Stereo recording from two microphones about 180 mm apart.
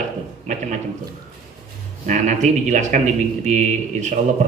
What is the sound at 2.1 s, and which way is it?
Speech, 40° right (ahead or behind).